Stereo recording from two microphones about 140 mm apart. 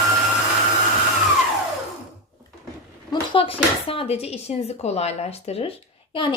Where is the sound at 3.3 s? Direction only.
40° left (ahead or behind).